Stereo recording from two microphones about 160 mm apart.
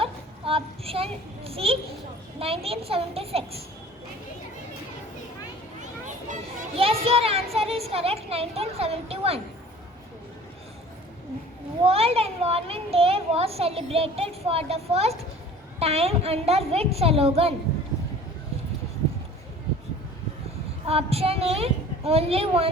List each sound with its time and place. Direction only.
0.0 s a sound: 35° right (ahead or behind)
2.4 s a child's voice: 35° right (ahead or behind)
6.1 s speech: 50° right (ahead or behind)
6.7 s a child's voice: 35° right (ahead or behind)
11.8 s a child's voice: 40° right (ahead or behind)
20.8 s a child's voice: 40° right (ahead or behind)